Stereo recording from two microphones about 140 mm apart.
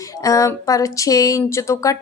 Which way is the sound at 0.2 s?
25° left (ahead or behind).